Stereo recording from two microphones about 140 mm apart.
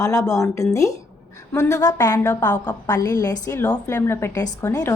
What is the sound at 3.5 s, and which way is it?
Speech, 15° left (ahead or behind).